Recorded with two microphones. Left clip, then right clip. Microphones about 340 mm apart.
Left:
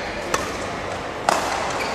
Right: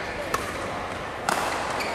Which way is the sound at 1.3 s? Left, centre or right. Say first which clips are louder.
Left 6 dB; left.